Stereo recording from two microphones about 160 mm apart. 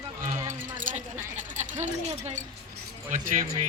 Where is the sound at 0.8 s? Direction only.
55° right (ahead or behind).